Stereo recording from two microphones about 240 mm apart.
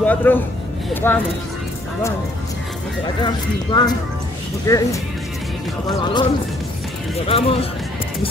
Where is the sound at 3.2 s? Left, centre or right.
Centre.